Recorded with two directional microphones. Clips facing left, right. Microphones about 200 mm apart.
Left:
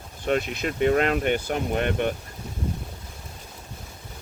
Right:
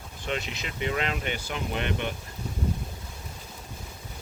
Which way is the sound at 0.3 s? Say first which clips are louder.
Left 8 dB; 50° left (ahead or behind).